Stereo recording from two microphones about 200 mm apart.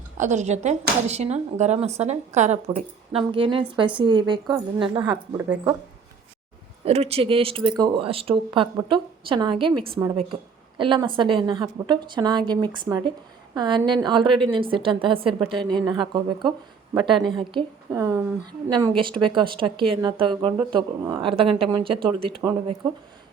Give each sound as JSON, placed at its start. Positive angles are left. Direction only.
{"t": 0.2, "sound": "a woman's voice", "side_deg": -35}
{"t": 6.8, "sound": "a woman's voice", "side_deg": -30}